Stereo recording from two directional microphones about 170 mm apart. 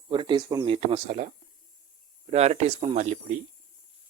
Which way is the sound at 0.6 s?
35° right (ahead or behind).